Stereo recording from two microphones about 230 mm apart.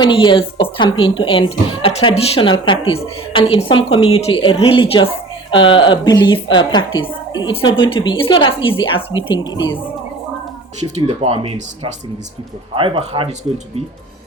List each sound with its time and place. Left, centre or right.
0.0 s speech: centre
10.8 s speech: right